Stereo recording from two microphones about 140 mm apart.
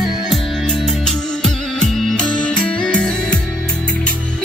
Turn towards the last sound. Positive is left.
turn(degrees=5)  # may be behind; listen again after turning